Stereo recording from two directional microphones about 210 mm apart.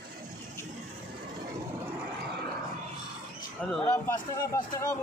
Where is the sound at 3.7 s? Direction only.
10° left (ahead or behind).